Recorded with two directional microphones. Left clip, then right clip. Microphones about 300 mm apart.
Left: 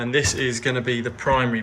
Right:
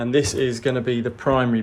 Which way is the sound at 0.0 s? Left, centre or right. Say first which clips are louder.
Right 1 dB; centre.